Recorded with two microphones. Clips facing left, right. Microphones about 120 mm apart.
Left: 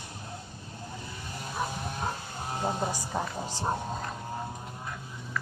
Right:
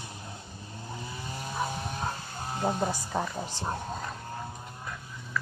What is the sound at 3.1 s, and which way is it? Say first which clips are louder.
Speech: right 2 dB; 10° left (ahead or behind).